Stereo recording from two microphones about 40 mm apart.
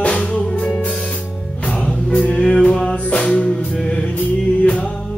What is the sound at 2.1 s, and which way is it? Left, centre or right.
Music, left.